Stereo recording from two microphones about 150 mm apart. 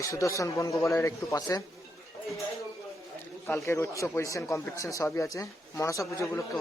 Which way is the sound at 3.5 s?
15° left (ahead or behind).